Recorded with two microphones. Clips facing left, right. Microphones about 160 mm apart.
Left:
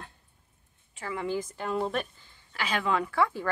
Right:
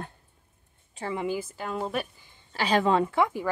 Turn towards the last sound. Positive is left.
turn(degrees=-15)  # may be behind; listen again after turning